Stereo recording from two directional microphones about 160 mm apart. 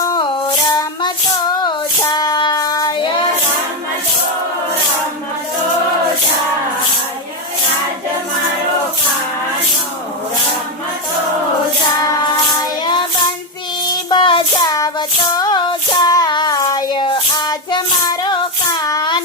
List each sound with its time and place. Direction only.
0.0 s music: 20° left (ahead or behind)
1.6 s child singing: 25° left (ahead or behind)
14.1 s child singing: 30° left (ahead or behind)